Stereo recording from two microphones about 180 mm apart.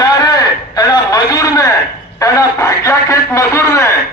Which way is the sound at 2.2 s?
20° left (ahead or behind).